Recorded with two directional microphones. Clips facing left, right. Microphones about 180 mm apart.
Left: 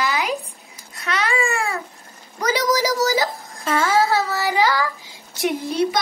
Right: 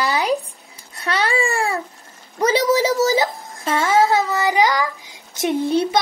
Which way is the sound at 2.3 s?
25° right (ahead or behind).